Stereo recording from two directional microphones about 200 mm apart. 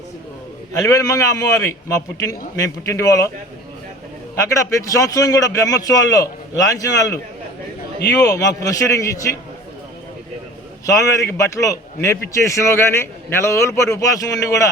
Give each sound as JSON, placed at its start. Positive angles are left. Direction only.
{"t": 0.8, "sound": "a man's voice", "side_deg": 15}
{"t": 4.4, "sound": "a man's voice", "side_deg": 15}
{"t": 8.2, "sound": "a man's voice", "side_deg": 15}
{"t": 10.8, "sound": "a man's voice", "side_deg": 15}